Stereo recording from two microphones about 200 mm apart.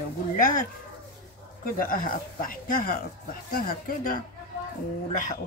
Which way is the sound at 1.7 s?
45° left (ahead or behind).